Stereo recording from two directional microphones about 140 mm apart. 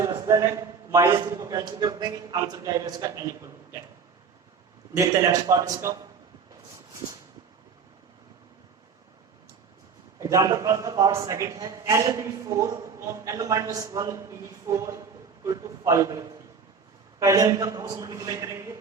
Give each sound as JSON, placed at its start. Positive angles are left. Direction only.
{"t": 0.3, "sound": "a man's voice", "side_deg": -20}
{"t": 4.9, "sound": "a man's voice", "side_deg": -20}
{"t": 10.2, "sound": "a man's voice", "side_deg": -20}